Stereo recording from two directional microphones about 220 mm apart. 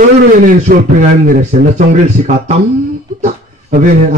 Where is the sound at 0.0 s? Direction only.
40° right (ahead or behind).